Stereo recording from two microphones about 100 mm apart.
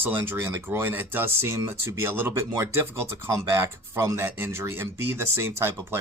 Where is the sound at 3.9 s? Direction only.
25° right (ahead or behind).